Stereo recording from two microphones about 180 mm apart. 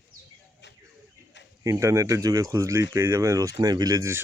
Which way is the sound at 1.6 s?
15° right (ahead or behind).